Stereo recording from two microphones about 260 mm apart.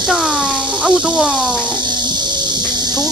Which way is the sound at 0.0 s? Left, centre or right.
Centre.